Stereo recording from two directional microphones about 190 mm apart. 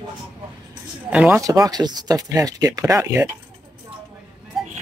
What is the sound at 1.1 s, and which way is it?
Speech, 5° right (ahead or behind).